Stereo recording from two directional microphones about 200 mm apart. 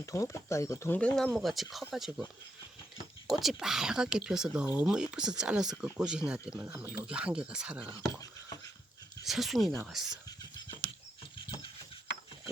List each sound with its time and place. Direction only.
0.0 s speech: 15° left (ahead or behind); by 2.2 s centre (ahead or behind)
3.2 s speech: centre (ahead or behind)
8.0 s a sound: 15° left (ahead or behind)
9.2 s speech: centre (ahead or behind)
11.3 s rodents: 25° left (ahead or behind)